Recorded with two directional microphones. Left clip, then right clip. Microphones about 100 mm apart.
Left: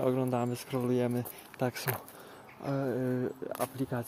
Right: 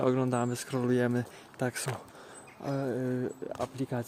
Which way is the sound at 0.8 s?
55° right (ahead or behind).